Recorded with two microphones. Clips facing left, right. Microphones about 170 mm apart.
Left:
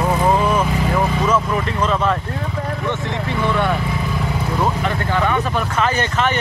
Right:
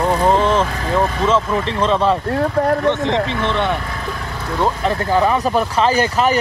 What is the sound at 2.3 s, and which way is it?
Speech, 65° right (ahead or behind).